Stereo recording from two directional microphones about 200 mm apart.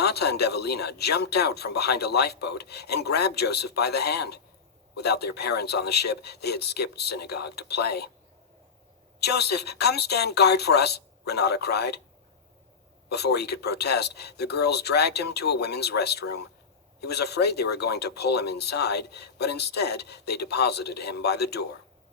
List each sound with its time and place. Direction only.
0.0 s speech: 55° left (ahead or behind)
9.2 s speech: 55° left (ahead or behind)
13.1 s speech: 55° left (ahead or behind)